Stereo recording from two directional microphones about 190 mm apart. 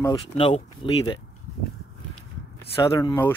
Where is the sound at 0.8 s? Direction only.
25° left (ahead or behind).